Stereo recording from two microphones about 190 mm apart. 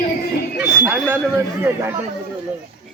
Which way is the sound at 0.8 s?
10° right (ahead or behind).